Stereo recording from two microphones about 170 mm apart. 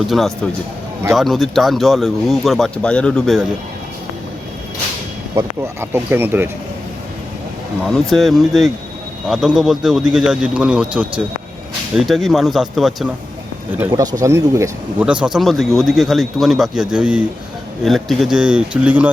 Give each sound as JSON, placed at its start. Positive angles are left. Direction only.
{"t": 0.1, "sound": "speech", "side_deg": 0}
{"t": 5.3, "sound": "speech", "side_deg": -15}
{"t": 7.9, "sound": "speech", "side_deg": 0}
{"t": 13.7, "sound": "speech", "side_deg": -20}
{"t": 15.0, "sound": "speech", "side_deg": -5}